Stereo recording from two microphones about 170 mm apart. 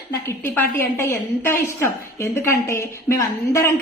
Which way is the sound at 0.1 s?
15° left (ahead or behind).